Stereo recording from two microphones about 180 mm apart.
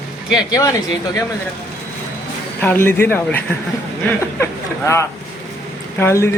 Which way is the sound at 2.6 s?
10° left (ahead or behind).